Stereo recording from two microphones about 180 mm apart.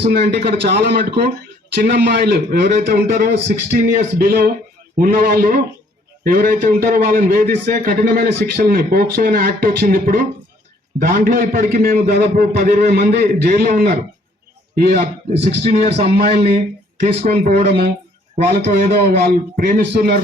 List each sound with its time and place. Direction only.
0.1 s a man's voice: 65° right (ahead or behind)
15.9 s speech: 35° right (ahead or behind)
16.1 s a man's voice: 60° right (ahead or behind)
17.0 s speech: 45° right (ahead or behind)
18.5 s a man's voice: 65° right (ahead or behind)